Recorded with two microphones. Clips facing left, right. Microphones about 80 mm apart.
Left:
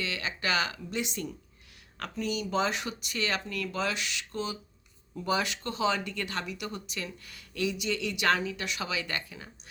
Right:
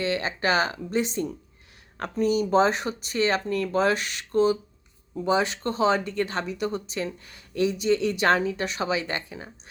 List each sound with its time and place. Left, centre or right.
0.0 s speech: right
5.1 s speech: right